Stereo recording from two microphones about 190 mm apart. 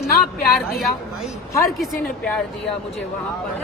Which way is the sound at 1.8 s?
5° left (ahead or behind).